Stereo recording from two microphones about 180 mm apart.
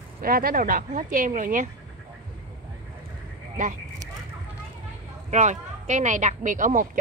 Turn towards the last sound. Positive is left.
turn(degrees=-50)  # may be behind; listen again after turning